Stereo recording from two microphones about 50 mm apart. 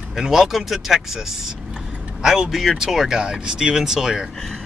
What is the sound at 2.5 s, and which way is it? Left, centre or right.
Speech, centre.